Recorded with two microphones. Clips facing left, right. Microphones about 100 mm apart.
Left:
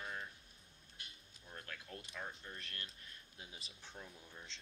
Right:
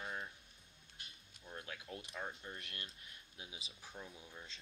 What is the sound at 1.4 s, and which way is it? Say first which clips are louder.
Speech: right 3 dB; 15° right (ahead or behind).